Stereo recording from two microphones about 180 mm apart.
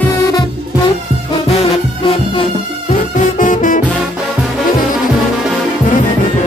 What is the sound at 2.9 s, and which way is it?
Music, 45° left (ahead or behind).